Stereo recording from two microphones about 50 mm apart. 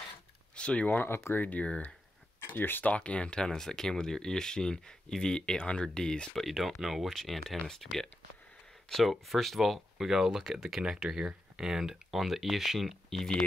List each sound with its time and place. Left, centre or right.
0.6 s a sound: left
0.8 s speech: left
1.4 s speech: left
2.5 s speech: left
2.8 s speech: left
6.3 s speech: centre